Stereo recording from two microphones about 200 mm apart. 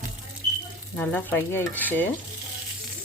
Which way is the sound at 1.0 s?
10° left (ahead or behind).